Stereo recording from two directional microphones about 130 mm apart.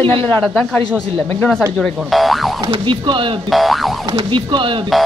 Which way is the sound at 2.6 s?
35° right (ahead or behind).